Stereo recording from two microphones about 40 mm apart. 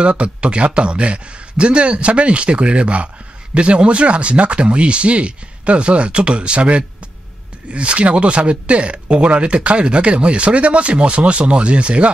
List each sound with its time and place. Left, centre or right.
0.0 s speech: right